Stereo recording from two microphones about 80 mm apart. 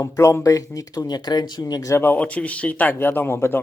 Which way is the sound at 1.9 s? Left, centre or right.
Left.